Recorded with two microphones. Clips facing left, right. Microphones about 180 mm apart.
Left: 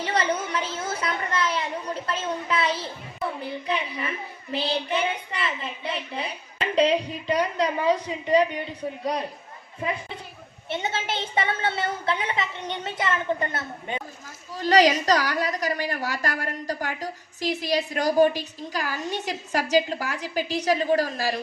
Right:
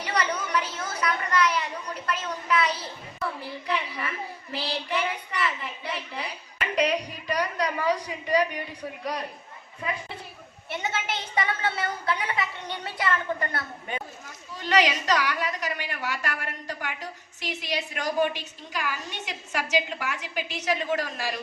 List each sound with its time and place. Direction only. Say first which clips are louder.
0.0 s a woman's voice: left 3 dB; 25° left (ahead or behind)
10.7 s a child's voice: left 2 dB; 25° left (ahead or behind)
14.5 s a woman's voice: left 5 dB; 35° left (ahead or behind)